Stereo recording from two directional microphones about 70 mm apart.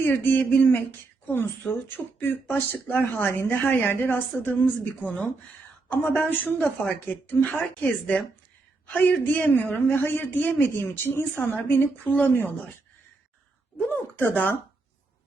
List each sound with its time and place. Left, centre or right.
0.0 s a woman's voice: left
13.9 s a woman's voice: left